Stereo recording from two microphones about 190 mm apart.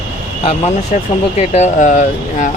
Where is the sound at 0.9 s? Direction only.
40° left (ahead or behind).